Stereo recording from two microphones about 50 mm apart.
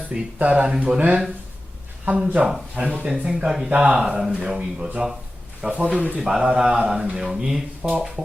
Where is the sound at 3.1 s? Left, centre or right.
Centre.